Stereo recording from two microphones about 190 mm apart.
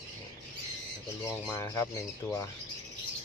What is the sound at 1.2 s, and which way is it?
Speech, 15° left (ahead or behind).